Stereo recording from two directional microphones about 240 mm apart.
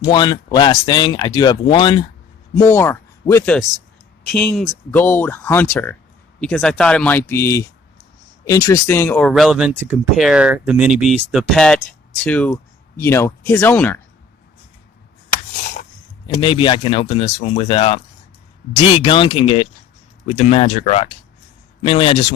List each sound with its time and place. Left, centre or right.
0.0 s speech: centre
16.2 s speech: left
19.0 s speech: left